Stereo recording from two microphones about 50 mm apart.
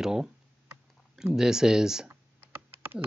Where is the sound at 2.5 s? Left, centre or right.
Right.